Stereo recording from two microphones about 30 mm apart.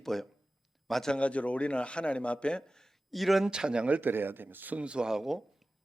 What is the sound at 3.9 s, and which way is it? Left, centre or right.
Speech, right.